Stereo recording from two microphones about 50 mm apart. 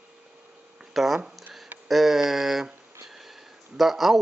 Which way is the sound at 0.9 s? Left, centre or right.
Centre.